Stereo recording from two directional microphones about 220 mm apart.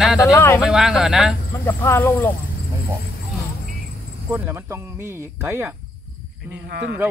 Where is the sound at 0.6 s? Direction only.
Centre (ahead or behind).